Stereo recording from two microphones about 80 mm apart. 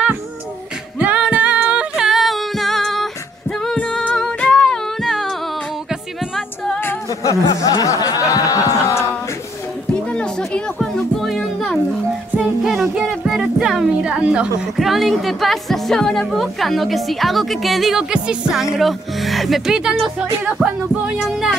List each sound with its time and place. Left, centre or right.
0.9 s music: centre
3.7 s music: centre
7.1 s a sound: left
10.1 s music: centre
14.8 s a woman's voice: centre